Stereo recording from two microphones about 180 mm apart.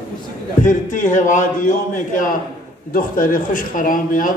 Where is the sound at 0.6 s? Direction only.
45° left (ahead or behind).